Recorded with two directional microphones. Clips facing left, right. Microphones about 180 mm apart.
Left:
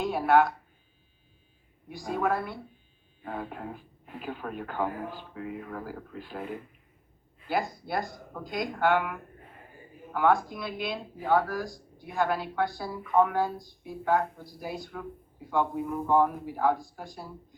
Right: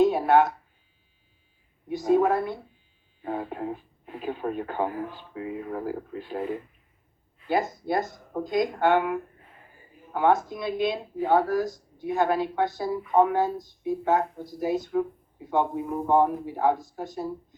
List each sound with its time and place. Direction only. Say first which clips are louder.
0.0 s a sound: right 4 dB; 20° right (ahead or behind)
1.9 s speech: right 8 dB; 20° right (ahead or behind)
7.4 s speech: right 5 dB; 20° right (ahead or behind)